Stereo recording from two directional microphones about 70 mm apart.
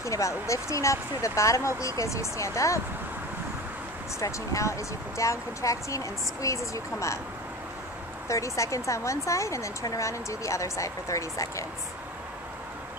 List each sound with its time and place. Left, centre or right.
0.0 s speech: left
4.2 s speech: left
8.3 s speech: left